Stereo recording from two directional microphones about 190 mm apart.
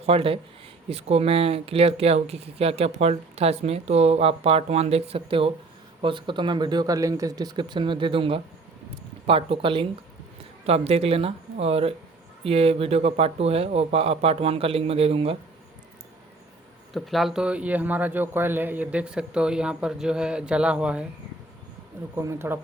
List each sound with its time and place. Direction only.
0.0 s speech: 30° right (ahead or behind)
16.9 s speech: centre (ahead or behind)
22.1 s speech: 15° right (ahead or behind)